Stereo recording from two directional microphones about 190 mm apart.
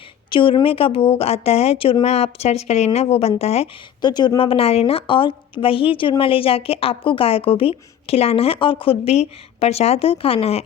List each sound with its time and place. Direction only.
0.3 s speech: 25° left (ahead or behind)